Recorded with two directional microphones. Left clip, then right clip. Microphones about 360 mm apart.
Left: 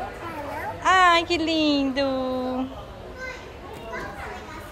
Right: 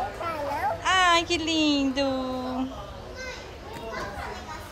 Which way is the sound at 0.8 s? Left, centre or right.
Centre.